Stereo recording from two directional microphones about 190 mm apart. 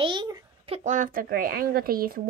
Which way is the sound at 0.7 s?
40° right (ahead or behind).